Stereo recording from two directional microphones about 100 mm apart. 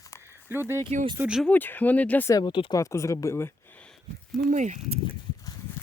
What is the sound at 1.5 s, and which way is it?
Speech, 20° left (ahead or behind).